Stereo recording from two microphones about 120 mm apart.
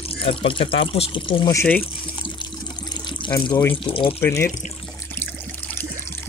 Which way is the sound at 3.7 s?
50° left (ahead or behind).